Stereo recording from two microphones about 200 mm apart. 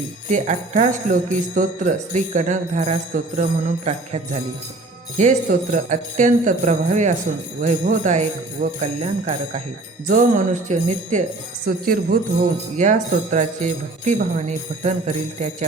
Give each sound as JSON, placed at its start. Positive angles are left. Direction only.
{"t": 0.3, "sound": "music", "side_deg": -35}
{"t": 11.6, "sound": "jingle bell", "side_deg": -45}
{"t": 12.7, "sound": "music", "side_deg": -40}